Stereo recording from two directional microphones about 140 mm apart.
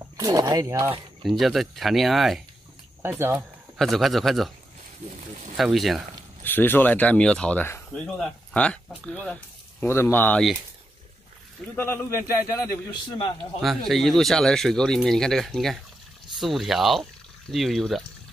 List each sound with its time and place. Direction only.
0.2 s speech: 25° right (ahead or behind)
1.2 s speech: centre (ahead or behind)
3.0 s speech: 15° right (ahead or behind)
3.7 s speech: centre (ahead or behind)
5.6 s speech: centre (ahead or behind)
6.4 s speech: 15° left (ahead or behind)
11.7 s a man's voice: 15° left (ahead or behind)
13.6 s speech: centre (ahead or behind)